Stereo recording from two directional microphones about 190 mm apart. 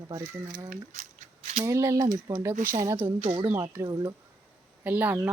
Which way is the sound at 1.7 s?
15° right (ahead or behind).